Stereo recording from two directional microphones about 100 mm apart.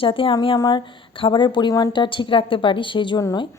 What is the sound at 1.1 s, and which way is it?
A woman's voice, 60° left (ahead or behind).